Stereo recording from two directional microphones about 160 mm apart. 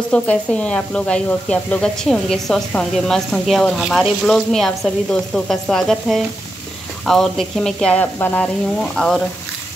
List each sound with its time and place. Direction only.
0.1 s speech: 10° left (ahead or behind)